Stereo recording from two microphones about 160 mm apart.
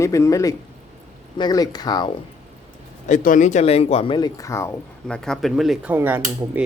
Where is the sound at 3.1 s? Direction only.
50° left (ahead or behind); by 4.8 s 15° left (ahead or behind).